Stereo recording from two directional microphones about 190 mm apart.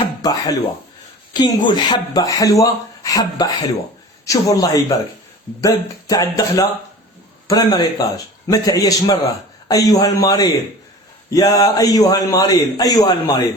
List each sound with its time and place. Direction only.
0.2 s a man's voice: 20° left (ahead or behind)